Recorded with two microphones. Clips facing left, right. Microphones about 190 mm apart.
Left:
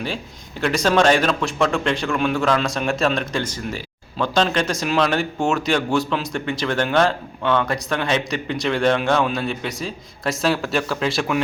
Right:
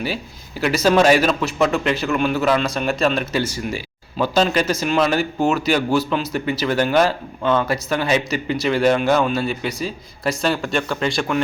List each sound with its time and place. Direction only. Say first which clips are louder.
0.6 s a man's voice: right 2 dB; 5° right (ahead or behind)